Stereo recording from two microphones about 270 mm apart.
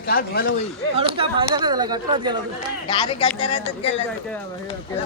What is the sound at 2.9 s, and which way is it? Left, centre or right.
Speech, centre.